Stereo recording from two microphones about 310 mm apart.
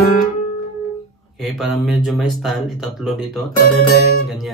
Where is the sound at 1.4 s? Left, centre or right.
Centre.